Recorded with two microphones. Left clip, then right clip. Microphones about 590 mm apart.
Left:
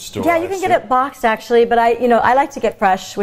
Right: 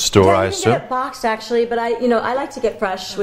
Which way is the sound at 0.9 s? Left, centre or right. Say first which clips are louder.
Left 5 dB; left.